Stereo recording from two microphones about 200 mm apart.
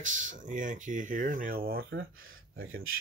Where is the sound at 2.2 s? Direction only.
80° right.